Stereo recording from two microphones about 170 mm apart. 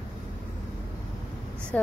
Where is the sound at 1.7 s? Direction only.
10° left (ahead or behind).